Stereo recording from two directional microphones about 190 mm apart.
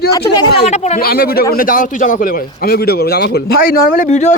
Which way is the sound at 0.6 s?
35° left (ahead or behind).